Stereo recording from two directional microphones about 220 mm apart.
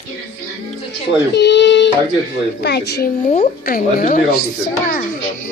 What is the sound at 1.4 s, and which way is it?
Speech, 50° left (ahead or behind).